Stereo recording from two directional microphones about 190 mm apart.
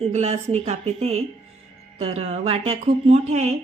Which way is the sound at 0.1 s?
35° right (ahead or behind).